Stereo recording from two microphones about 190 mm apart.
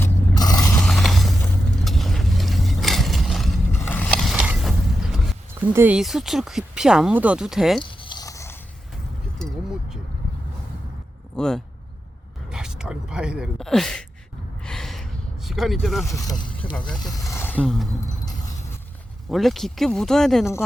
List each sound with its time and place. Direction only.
0.0 s scrape: 20° left (ahead or behind)
0.8 s a sound: 5° left (ahead or behind)
1.8 s vehicle: centre (ahead or behind)
3.8 s a sound: 10° left (ahead or behind)
5.5 s speech: 10° right (ahead or behind)
7.9 s a sound: 25° left (ahead or behind)
11.3 s speech: 5° left (ahead or behind)
14.6 s a sound: 5° left (ahead or behind)
16.0 s speech: 15° left (ahead or behind)
16.3 s speech: 5° left (ahead or behind)
17.2 s speech: 15° left (ahead or behind)
19.3 s speech: centre (ahead or behind)